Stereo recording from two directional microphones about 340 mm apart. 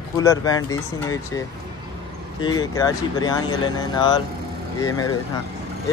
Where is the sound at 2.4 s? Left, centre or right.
Centre.